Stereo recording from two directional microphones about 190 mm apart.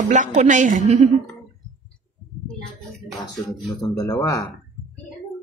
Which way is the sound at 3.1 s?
Centre (ahead or behind).